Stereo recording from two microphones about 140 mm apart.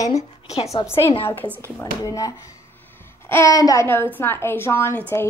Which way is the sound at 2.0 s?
25° left (ahead or behind).